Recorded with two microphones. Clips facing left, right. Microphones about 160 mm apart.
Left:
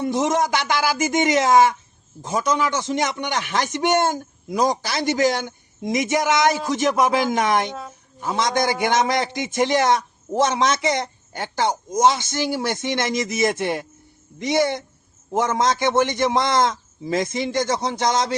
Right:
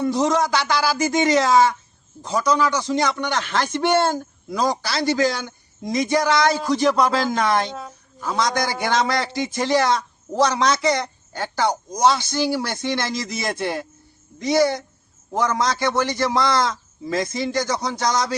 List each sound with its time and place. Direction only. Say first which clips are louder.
0.0 s a man's voice: right 1 dB; 20° left (ahead or behind)